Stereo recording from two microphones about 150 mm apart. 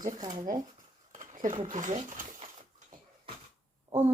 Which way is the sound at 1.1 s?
60° right (ahead or behind).